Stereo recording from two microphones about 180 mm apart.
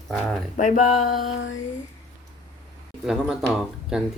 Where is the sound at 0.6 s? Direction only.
45° left (ahead or behind).